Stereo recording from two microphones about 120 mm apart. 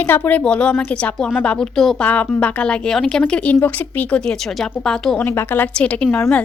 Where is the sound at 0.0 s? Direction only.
15° left (ahead or behind).